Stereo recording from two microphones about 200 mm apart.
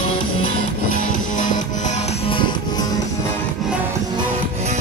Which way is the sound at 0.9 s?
45° left (ahead or behind).